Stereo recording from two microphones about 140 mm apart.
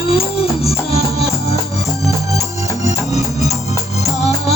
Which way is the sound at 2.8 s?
50° left (ahead or behind).